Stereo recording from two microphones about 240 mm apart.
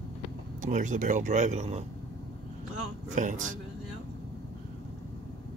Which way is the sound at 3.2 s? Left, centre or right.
Right.